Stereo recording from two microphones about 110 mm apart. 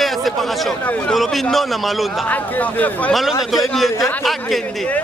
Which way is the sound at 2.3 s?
15° left (ahead or behind).